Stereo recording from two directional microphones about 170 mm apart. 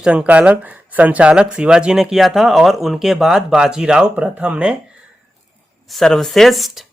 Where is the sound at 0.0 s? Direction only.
5° right (ahead or behind).